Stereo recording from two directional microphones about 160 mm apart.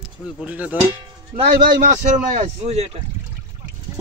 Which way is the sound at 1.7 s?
50° right (ahead or behind).